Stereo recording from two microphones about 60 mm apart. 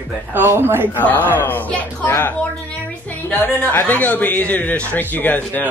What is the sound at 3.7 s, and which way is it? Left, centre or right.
A man's voice, left.